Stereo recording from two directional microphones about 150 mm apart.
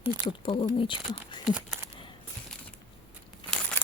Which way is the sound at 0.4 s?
35° left (ahead or behind).